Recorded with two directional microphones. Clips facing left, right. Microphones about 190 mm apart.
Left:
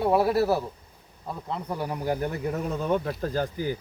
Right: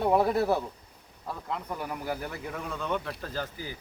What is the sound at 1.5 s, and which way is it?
Speech, 35° left (ahead or behind).